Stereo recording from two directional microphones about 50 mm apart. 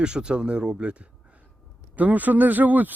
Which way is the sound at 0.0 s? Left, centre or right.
Centre.